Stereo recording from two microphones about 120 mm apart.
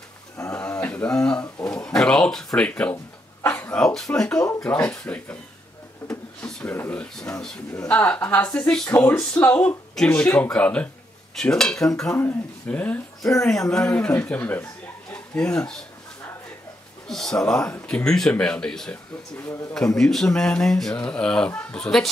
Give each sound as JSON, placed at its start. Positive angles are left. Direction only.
{"t": 0.4, "sound": "a sound", "side_deg": 25}
{"t": 0.7, "sound": "speech", "side_deg": 10}
{"t": 6.0, "sound": "a sound", "side_deg": 15}
{"t": 6.6, "sound": "speech", "side_deg": 15}
{"t": 17.1, "sound": "speech", "side_deg": 5}
{"t": 20.0, "sound": "speech", "side_deg": 5}